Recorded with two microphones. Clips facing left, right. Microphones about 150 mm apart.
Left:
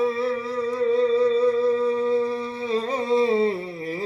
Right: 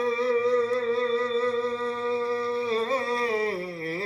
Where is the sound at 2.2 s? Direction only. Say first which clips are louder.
Left 1 dB; 20° left (ahead or behind).